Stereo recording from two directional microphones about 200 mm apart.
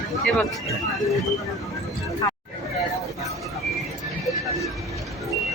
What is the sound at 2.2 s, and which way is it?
Hubbub, 15° left (ahead or behind).